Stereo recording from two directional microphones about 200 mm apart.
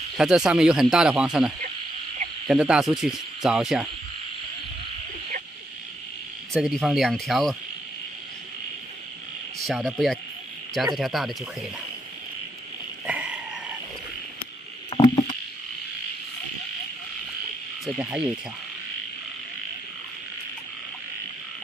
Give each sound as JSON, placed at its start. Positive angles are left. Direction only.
{"t": 0.2, "sound": "speech", "side_deg": -5}
{"t": 6.5, "sound": "speech", "side_deg": 0}
{"t": 9.6, "sound": "speech", "side_deg": 0}
{"t": 13.0, "sound": "a sound", "side_deg": -5}
{"t": 14.9, "sound": "rowboat", "side_deg": 20}
{"t": 17.8, "sound": "speech", "side_deg": -5}